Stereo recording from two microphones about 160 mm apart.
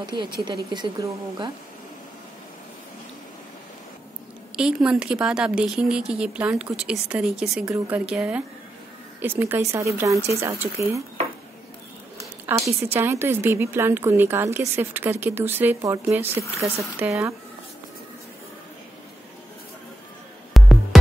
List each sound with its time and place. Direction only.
0.0 s a woman's voice: 30° right (ahead or behind)
4.6 s a woman's voice: 5° right (ahead or behind)
12.2 s a woman's voice: 20° right (ahead or behind)
20.5 s music: centre (ahead or behind)